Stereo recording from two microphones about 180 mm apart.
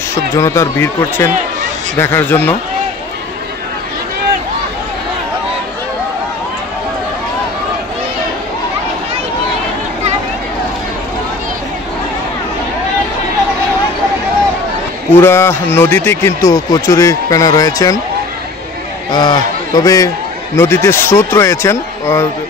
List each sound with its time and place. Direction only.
0.4 s a man's voice: 15° left (ahead or behind)
15.1 s a man's voice: 15° left (ahead or behind)
19.1 s a man's voice: 25° left (ahead or behind)